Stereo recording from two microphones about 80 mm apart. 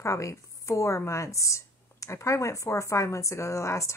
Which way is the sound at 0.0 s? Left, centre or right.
Left.